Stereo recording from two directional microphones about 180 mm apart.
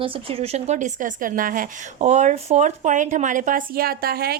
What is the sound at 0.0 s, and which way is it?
A woman's voice, 30° right (ahead or behind).